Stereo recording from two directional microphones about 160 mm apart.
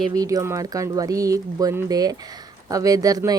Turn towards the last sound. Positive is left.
turn(degrees=-20)  # may be behind; listen again after turning